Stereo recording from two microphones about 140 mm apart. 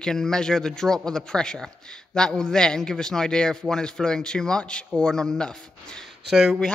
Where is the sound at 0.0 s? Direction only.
5° left (ahead or behind).